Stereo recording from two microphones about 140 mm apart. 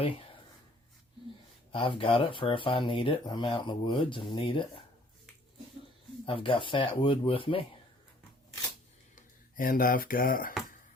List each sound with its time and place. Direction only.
1.7 s speech: 40° left (ahead or behind)
6.2 s speech: 40° left (ahead or behind)
9.6 s a sound: 90° left